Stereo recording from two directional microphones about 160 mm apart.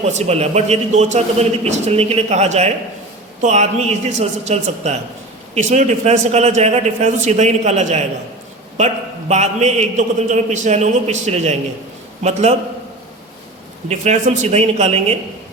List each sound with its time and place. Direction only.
0.0 s a man's voice: 45° right (ahead or behind)
13.8 s a man's voice: 45° right (ahead or behind)